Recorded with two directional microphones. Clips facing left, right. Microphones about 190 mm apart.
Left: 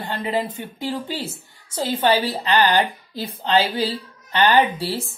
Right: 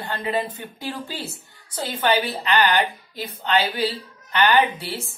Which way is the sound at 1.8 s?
25° left (ahead or behind).